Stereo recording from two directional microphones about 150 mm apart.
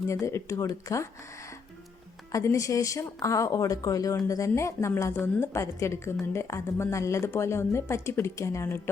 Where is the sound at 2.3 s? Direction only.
20° left (ahead or behind).